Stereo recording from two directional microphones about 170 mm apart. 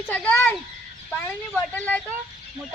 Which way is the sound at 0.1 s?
10° left (ahead or behind).